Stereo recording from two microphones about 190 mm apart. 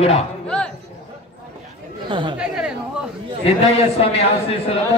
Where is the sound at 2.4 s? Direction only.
5° right (ahead or behind).